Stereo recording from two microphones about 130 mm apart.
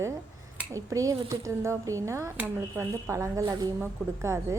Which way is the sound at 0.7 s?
25° right (ahead or behind).